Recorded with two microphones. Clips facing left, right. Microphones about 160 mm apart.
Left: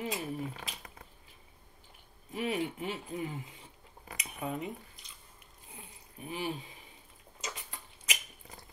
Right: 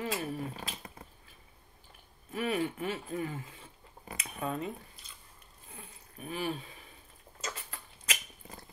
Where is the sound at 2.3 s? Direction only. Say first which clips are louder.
Right 1 dB; 20° left (ahead or behind).